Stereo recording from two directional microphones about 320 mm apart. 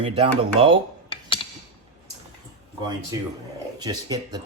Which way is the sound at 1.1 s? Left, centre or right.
Centre.